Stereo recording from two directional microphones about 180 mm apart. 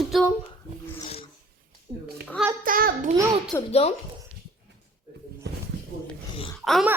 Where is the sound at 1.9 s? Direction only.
25° right (ahead or behind).